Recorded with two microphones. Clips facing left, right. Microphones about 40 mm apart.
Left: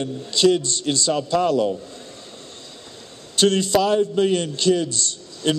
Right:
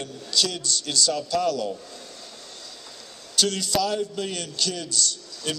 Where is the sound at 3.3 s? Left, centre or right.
Left.